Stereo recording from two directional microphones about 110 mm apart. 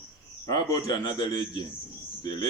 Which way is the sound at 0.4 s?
35° left (ahead or behind).